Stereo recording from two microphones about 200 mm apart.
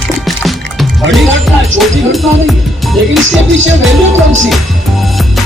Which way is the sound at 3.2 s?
70° right (ahead or behind).